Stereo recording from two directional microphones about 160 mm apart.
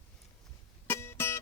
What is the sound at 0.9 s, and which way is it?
Music, 15° left (ahead or behind).